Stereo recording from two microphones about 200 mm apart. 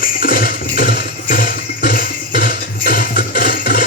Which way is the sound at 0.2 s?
45° left (ahead or behind).